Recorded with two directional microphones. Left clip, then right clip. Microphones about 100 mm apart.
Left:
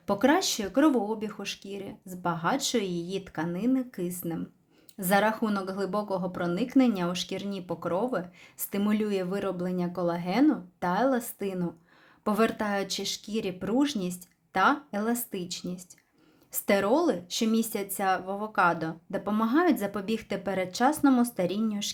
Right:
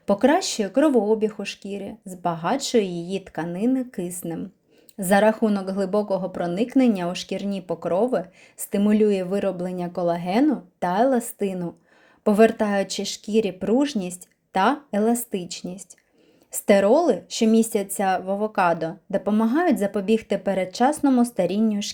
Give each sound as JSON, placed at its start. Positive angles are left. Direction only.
{"t": 0.0, "sound": "speech", "side_deg": -30}